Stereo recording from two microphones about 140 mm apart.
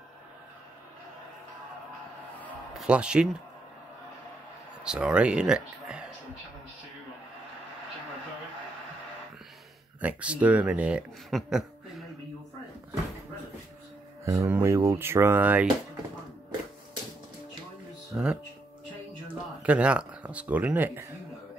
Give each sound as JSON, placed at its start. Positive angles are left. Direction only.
{"t": 2.7, "sound": "speech", "side_deg": -5}
{"t": 4.8, "sound": "speech", "side_deg": -5}
{"t": 9.9, "sound": "speech", "side_deg": -10}
{"t": 14.2, "sound": "speech", "side_deg": -20}
{"t": 18.1, "sound": "speech", "side_deg": -5}
{"t": 19.6, "sound": "speech", "side_deg": -10}